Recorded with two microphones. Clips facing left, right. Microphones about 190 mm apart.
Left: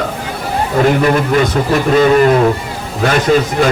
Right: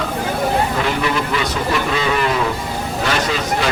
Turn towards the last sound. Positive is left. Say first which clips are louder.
# left 8 dB
turn(degrees=50)  # may be behind; listen again after turning